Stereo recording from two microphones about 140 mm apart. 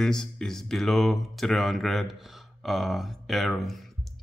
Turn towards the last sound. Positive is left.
turn(degrees=0)  # may be behind; listen again after turning